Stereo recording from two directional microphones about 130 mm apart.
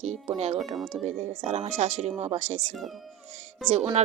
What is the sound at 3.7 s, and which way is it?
Speech, 50° right (ahead or behind).